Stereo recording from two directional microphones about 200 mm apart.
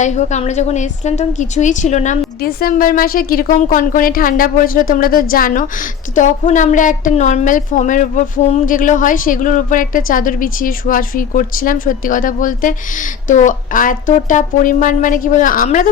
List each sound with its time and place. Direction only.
0.0 s a woman's voice: 35° left (ahead or behind)